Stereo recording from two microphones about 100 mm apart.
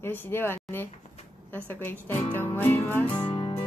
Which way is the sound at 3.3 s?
70° left (ahead or behind).